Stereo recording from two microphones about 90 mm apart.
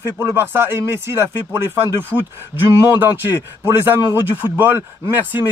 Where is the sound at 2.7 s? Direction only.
25° right (ahead or behind).